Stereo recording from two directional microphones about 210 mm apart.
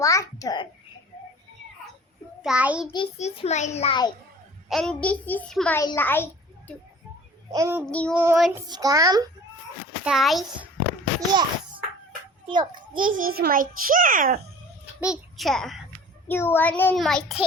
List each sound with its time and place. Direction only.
0.0 s a child's voice: 15° left (ahead or behind)
2.4 s a child's voice: 5° right (ahead or behind)
2.9 s a child's voice: 30° left (ahead or behind)
4.7 s a child's voice: 5° left (ahead or behind)
7.5 s a child's voice: 15° right (ahead or behind)
7.9 s a child's voice: 5° left (ahead or behind)
8.1 s a child's voice: 10° right (ahead or behind)
8.4 s a child's voice: centre (ahead or behind)
8.6 s a child's voice: 20° right (ahead or behind)
10.0 s a child's voice: centre (ahead or behind)
11.3 s a child's voice: 20° right (ahead or behind)
12.9 s a child's voice: 40° right (ahead or behind)
15.0 s a child's voice: centre (ahead or behind)